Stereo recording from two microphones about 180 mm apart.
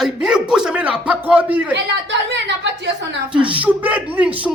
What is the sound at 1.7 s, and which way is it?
Speech, 80° right.